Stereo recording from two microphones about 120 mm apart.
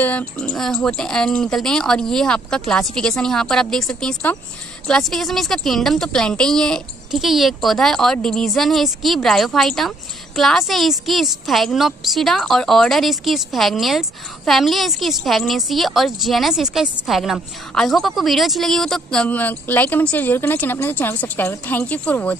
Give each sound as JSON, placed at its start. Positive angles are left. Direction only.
{"t": 0.0, "sound": "a woman's voice", "side_deg": 10}